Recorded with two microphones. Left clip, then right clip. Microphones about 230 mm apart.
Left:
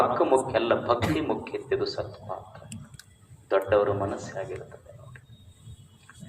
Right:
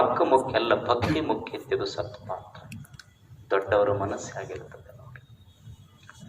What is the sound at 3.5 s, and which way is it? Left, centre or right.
Speech, right.